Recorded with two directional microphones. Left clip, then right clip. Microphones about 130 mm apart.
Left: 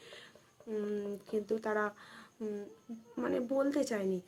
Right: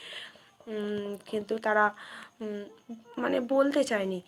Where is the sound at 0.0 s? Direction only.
25° left (ahead or behind).